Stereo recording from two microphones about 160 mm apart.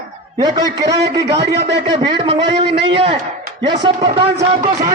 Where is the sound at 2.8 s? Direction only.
35° right (ahead or behind).